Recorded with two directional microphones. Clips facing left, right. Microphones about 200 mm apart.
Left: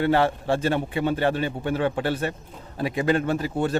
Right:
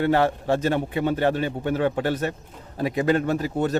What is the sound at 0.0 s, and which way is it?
A man's voice, 45° right (ahead or behind).